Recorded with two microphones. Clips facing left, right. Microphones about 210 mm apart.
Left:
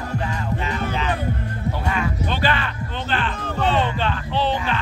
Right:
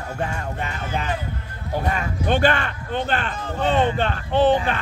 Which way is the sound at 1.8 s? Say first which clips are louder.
Even; 40° right (ahead or behind).